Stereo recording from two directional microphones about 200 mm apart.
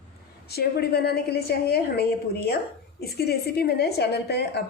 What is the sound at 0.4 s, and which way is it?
A woman's voice, 55° left (ahead or behind).